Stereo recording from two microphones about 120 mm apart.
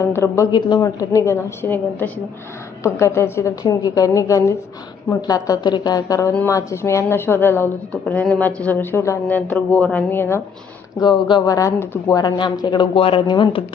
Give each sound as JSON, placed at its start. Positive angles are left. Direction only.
{"t": 0.0, "sound": "a woman's voice", "side_deg": 25}
{"t": 0.5, "sound": "speech", "side_deg": 40}
{"t": 0.9, "sound": "a woman's voice", "side_deg": 25}
{"t": 11.0, "sound": "a woman's voice", "side_deg": 40}
{"t": 12.2, "sound": "speech", "side_deg": 35}